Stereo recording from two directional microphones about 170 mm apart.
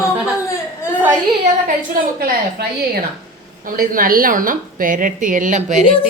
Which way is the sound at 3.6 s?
55° right (ahead or behind).